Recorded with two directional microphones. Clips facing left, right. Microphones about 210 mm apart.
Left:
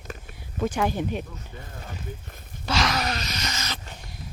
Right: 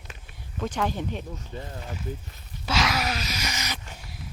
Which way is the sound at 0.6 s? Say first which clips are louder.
Left 3 dB; 10° left (ahead or behind).